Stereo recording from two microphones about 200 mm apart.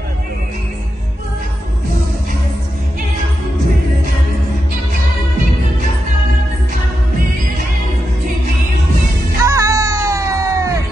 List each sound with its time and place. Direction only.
9.4 s music: 15° right (ahead or behind)